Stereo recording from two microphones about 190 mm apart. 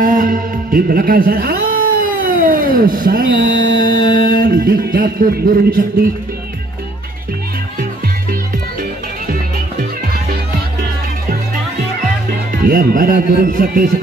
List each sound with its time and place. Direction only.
0.0 s speech: 45° right (ahead or behind)
12.6 s speech: 50° right (ahead or behind)